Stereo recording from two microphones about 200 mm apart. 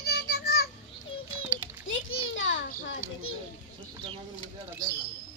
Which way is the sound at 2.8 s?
70° left (ahead or behind).